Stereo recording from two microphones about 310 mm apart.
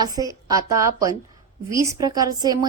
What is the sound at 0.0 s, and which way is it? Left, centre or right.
A woman's voice, centre.